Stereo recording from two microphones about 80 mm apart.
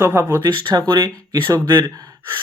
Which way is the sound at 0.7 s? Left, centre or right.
Right.